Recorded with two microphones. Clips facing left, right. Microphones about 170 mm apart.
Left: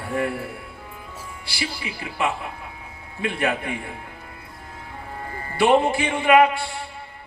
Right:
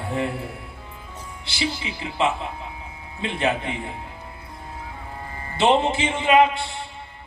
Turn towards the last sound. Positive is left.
turn(degrees=-20)  # may be behind; listen again after turning